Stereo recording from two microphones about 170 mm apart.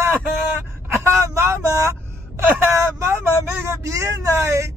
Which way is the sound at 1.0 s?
15° right (ahead or behind).